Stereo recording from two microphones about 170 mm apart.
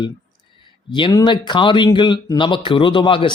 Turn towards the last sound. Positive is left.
turn(degrees=30)  # may be behind; listen again after turning